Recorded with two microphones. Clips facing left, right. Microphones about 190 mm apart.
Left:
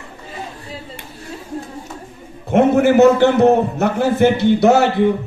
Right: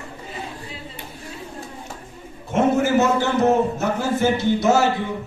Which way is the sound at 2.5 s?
60° left (ahead or behind).